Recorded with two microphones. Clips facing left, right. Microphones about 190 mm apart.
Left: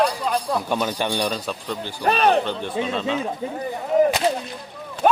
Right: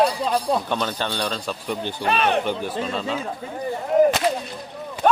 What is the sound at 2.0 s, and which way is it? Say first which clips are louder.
Speech: left 4 dB; 40° left (ahead or behind).